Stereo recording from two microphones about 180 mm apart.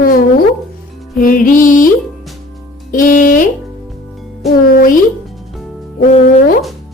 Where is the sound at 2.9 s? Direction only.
45° left (ahead or behind).